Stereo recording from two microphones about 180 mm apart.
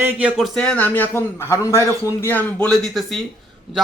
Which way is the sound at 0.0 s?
5° right (ahead or behind).